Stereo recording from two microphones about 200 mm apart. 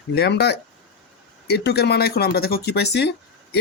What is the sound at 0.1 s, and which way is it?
Speech, 55° left (ahead or behind).